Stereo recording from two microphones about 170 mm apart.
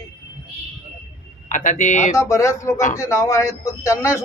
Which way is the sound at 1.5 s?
50° left (ahead or behind).